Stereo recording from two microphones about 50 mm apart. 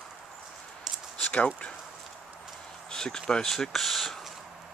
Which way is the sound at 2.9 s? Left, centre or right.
Centre.